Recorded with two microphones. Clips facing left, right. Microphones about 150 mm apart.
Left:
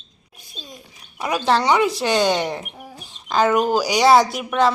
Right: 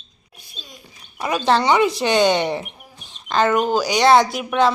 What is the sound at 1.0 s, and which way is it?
Speech, 5° left (ahead or behind).